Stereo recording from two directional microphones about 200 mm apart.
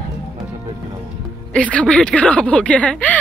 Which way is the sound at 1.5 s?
5° left (ahead or behind).